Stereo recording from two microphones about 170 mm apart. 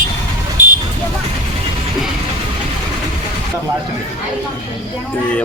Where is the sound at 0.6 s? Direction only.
50° right (ahead or behind).